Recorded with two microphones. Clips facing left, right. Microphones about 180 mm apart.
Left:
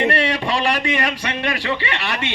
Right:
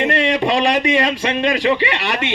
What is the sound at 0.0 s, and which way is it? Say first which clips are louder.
A man's voice: right 3 dB; 20° right (ahead or behind).